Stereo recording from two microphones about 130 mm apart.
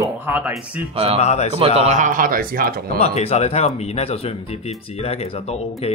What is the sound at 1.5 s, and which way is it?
Speech, 50° right (ahead or behind).